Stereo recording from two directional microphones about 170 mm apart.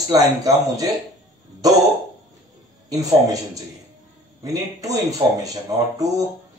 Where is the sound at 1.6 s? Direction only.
20° right (ahead or behind).